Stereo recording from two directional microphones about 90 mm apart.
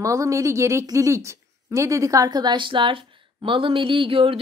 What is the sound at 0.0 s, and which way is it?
Speech, 35° right (ahead or behind).